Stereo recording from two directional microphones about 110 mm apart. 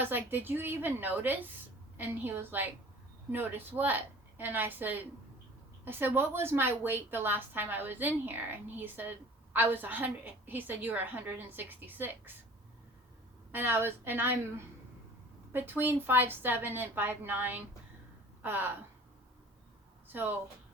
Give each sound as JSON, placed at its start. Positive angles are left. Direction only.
{"t": 0.0, "sound": "a woman's voice", "side_deg": -20}
{"t": 13.5, "sound": "a woman's voice", "side_deg": -20}